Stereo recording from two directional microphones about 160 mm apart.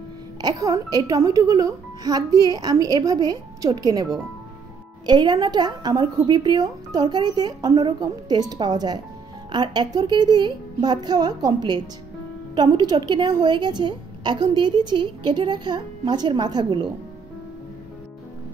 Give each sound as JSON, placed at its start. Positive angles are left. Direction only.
{"t": 0.4, "sound": "a woman's voice", "side_deg": -25}